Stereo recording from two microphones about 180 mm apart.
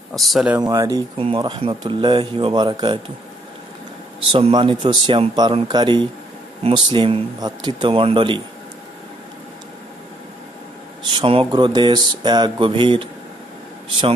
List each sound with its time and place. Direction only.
0.1 s speech: centre (ahead or behind)
0.6 s mantra: 20° right (ahead or behind)
4.2 s mantra: 30° right (ahead or behind)
11.1 s mantra: 30° right (ahead or behind)